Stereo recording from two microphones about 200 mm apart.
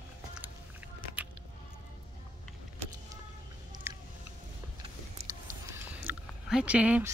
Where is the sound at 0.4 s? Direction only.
10° right (ahead or behind).